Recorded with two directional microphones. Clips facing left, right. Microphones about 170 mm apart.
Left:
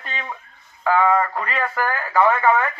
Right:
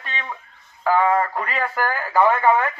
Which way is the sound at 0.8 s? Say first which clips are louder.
Even; 5° right (ahead or behind).